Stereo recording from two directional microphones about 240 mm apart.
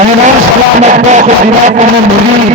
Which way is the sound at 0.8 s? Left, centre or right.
Right.